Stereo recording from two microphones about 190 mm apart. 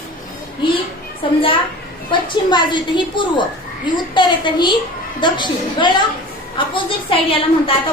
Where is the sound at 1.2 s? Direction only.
25° left (ahead or behind).